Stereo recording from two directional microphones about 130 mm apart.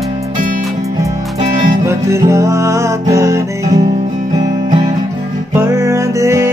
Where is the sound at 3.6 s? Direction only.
60° right (ahead or behind).